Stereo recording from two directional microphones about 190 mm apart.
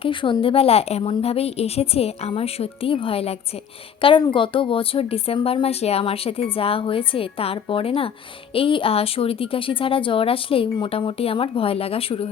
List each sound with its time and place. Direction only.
0.0 s a woman's voice: 25° left (ahead or behind)